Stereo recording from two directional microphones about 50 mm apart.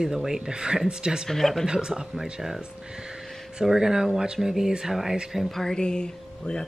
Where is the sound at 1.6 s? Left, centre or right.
Centre.